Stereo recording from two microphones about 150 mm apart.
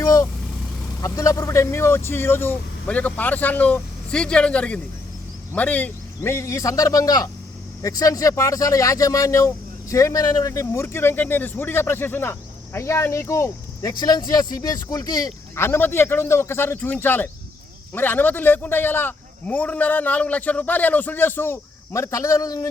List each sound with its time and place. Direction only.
0.0 s vehicle: 20° left (ahead or behind)
1.0 s speech: 25° left (ahead or behind)